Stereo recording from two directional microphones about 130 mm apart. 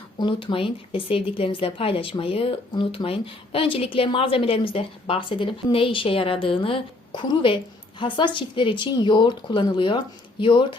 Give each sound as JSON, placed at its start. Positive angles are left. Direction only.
{"t": 0.2, "sound": "a woman's voice", "side_deg": 40}